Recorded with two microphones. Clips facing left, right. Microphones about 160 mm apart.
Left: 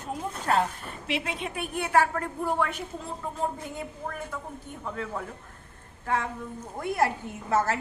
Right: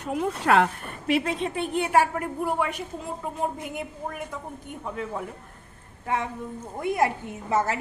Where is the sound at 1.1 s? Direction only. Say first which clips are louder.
Right 7 dB; 40° right (ahead or behind); by 2.7 s 10° right (ahead or behind).